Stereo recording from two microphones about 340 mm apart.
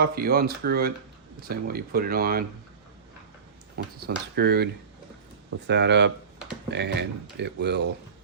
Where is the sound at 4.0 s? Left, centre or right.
Right.